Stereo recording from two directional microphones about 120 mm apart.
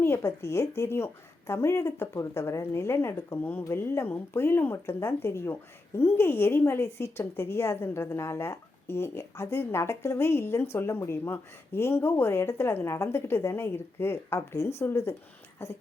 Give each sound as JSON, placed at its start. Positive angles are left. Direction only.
{"t": 0.0, "sound": "a woman's voice", "side_deg": 20}